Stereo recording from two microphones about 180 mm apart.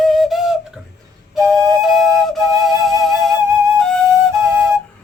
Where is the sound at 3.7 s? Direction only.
5° left (ahead or behind).